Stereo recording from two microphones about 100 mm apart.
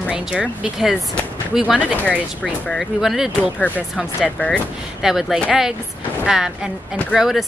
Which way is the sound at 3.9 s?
Centre (ahead or behind).